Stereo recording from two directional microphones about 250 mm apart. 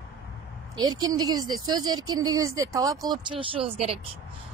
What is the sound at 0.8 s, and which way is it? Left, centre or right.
A woman's voice, centre.